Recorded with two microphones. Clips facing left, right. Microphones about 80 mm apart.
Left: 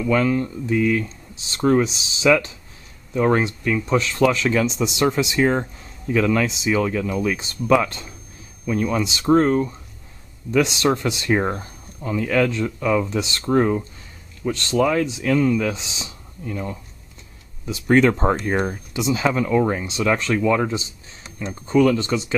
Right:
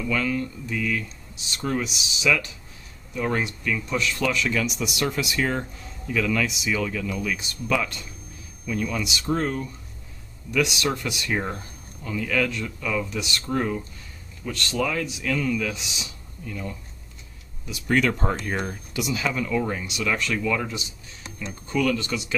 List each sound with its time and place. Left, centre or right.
0.1 s speech: left